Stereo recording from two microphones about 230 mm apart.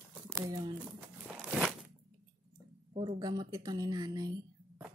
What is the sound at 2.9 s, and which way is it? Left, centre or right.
Speech, centre.